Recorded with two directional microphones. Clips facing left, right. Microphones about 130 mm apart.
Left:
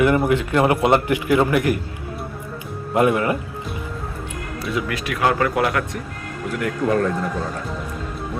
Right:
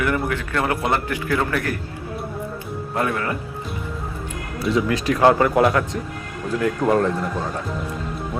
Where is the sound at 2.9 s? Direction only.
20° left (ahead or behind).